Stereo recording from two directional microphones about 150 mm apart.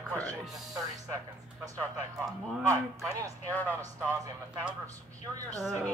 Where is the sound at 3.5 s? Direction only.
10° left (ahead or behind).